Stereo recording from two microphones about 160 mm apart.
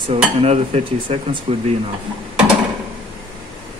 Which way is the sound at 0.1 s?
40° right (ahead or behind).